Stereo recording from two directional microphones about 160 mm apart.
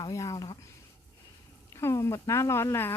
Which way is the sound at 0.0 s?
20° left (ahead or behind).